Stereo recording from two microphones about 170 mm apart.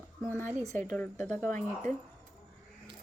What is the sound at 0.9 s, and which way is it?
Speech, centre (ahead or behind).